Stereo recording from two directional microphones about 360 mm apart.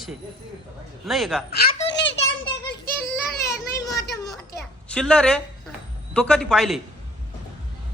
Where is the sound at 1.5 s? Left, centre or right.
Left.